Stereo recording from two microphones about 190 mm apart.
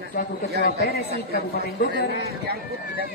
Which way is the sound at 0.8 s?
55° left (ahead or behind).